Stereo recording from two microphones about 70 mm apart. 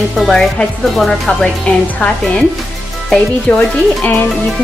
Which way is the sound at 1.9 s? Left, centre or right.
Centre.